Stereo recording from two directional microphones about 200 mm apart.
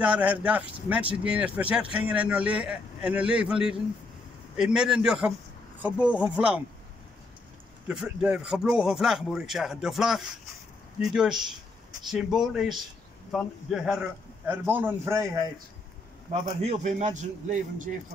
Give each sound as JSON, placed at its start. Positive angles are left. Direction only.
{"t": 0.0, "sound": "a man's voice", "side_deg": -5}
{"t": 7.9, "sound": "a man's voice", "side_deg": -5}
{"t": 16.3, "sound": "a man's voice", "side_deg": -30}